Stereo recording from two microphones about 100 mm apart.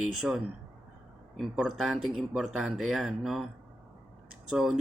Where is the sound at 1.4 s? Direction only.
Centre (ahead or behind).